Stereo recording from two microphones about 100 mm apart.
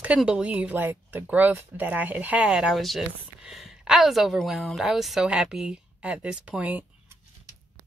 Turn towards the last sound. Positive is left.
turn(degrees=-15)  # may be behind; listen again after turning